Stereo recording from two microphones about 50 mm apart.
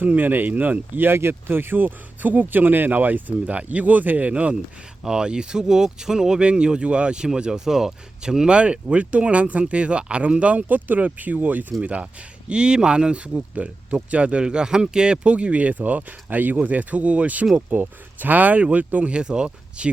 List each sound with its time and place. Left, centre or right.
0.0 s speech: right
5.0 s speech: centre